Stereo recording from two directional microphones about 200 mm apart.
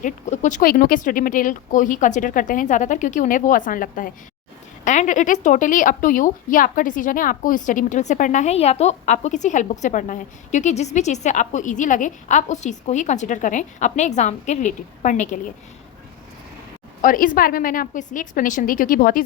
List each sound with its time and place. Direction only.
0.0 s a woman's voice: 40° left (ahead or behind)
17.0 s a woman's voice: 40° left (ahead or behind)